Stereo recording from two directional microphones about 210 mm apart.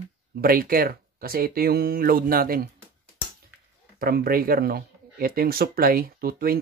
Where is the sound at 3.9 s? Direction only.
45° right (ahead or behind).